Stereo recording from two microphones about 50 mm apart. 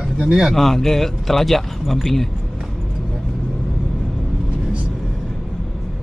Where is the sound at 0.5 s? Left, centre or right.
Centre.